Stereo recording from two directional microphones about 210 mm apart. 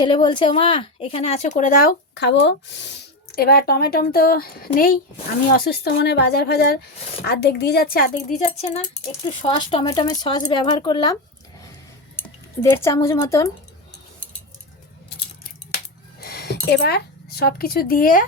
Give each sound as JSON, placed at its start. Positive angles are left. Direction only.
{"t": 0.0, "sound": "speech", "side_deg": 20}
{"t": 9.2, "sound": "speech", "side_deg": 25}
{"t": 12.6, "sound": "a woman's voice", "side_deg": 10}
{"t": 16.2, "sound": "speech", "side_deg": 50}